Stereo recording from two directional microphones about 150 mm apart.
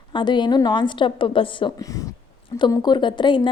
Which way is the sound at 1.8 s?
20° left (ahead or behind).